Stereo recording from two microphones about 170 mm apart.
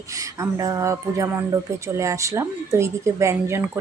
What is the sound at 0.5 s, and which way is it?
Music, 20° right (ahead or behind).